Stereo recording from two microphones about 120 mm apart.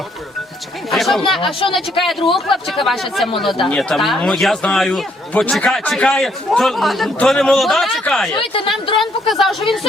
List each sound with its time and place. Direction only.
0.9 s a man's voice: centre (ahead or behind)
1.4 s speech: 50° left (ahead or behind)
1.7 s a man's voice: centre (ahead or behind)
8.4 s speech: 45° left (ahead or behind)
9.0 s a man's voice: centre (ahead or behind)